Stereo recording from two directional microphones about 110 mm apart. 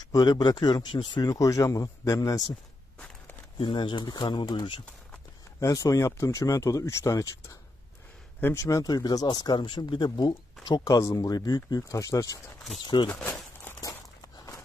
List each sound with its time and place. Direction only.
0.1 s speech: 40° left (ahead or behind)
1.3 s speech: 30° left (ahead or behind)
3.5 s speech: 45° left (ahead or behind)
5.6 s speech: 30° left (ahead or behind)
12.8 s speech: 45° left (ahead or behind)
13.1 s speech: 15° left (ahead or behind)